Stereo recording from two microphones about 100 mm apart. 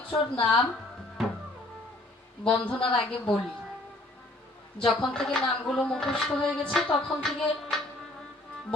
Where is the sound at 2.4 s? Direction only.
10° left (ahead or behind).